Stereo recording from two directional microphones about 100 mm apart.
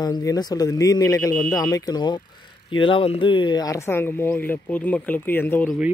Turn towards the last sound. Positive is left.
turn(degrees=20)  # may be behind; listen again after turning